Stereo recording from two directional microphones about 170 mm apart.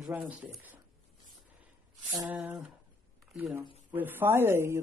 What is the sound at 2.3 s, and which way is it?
Speech, 5° right (ahead or behind).